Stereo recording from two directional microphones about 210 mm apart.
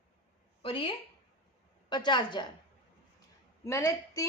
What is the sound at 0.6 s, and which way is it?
A woman's voice, 25° left (ahead or behind).